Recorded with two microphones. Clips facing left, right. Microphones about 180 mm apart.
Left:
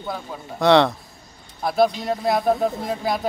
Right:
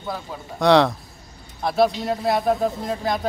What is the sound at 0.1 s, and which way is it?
A man's voice, centre (ahead or behind).